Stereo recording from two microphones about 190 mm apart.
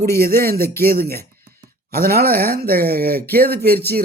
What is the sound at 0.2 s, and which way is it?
Speech, 55° right (ahead or behind).